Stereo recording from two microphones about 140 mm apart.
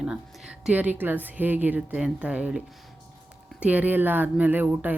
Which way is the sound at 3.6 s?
10° right (ahead or behind).